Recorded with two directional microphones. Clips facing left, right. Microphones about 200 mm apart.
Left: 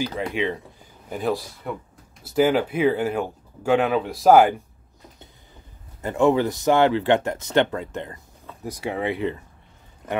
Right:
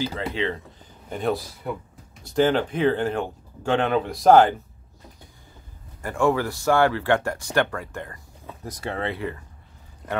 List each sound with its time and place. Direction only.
0.0 s speech: 15° left (ahead or behind)
5.9 s speech: 20° left (ahead or behind)